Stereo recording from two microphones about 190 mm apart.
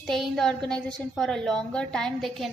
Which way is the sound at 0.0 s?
Centre (ahead or behind).